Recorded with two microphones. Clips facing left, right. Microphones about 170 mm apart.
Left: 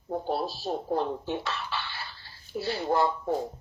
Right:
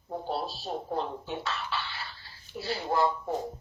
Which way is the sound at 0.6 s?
45° left (ahead or behind).